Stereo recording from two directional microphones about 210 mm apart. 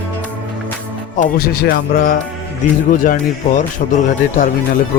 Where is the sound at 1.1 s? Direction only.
40° left (ahead or behind).